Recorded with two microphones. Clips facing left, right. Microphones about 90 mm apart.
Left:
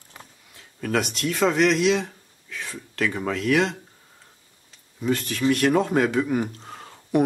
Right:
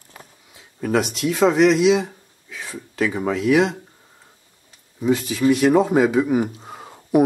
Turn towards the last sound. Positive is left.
turn(degrees=-10)  # may be behind; listen again after turning